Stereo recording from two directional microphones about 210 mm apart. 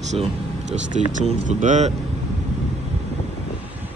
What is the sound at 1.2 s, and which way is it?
Speech, 35° right (ahead or behind).